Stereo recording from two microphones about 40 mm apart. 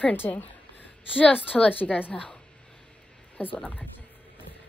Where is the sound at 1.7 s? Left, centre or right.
Left.